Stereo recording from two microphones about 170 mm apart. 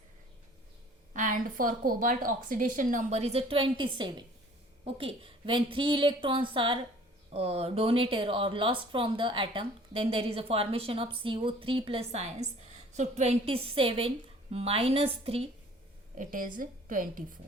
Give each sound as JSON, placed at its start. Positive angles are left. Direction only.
{"t": 1.1, "sound": "a woman's voice", "side_deg": -50}
{"t": 16.1, "sound": "a woman's voice", "side_deg": -50}